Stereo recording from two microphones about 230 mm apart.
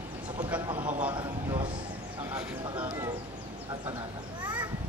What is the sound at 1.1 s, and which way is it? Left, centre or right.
Speech, right.